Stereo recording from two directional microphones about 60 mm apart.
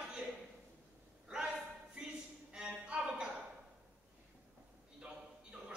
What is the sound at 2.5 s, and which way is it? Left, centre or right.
Music, centre.